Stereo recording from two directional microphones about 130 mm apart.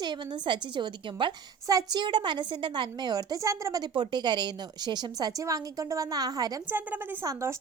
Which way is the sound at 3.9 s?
35° right (ahead or behind).